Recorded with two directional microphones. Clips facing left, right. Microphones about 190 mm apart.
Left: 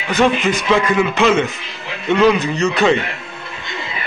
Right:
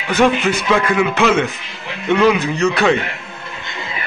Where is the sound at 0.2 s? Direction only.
10° right (ahead or behind).